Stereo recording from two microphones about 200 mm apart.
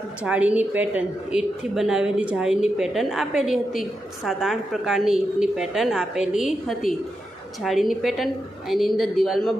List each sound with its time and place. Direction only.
0.2 s a woman's voice: 5° right (ahead or behind)